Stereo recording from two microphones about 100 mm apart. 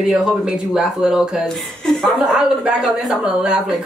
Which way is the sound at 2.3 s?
5° right (ahead or behind).